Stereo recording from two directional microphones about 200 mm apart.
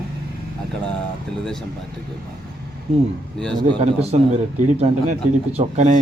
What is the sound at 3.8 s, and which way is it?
A man's voice, 30° right (ahead or behind).